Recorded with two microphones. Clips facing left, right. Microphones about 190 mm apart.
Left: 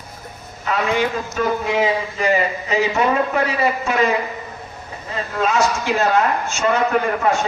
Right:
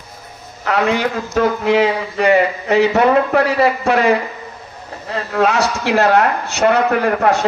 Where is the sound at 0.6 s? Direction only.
70° right (ahead or behind).